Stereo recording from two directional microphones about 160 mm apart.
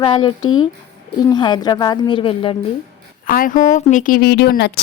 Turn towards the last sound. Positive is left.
turn(degrees=90)